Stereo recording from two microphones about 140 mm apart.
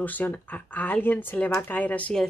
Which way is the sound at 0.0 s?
10° left (ahead or behind).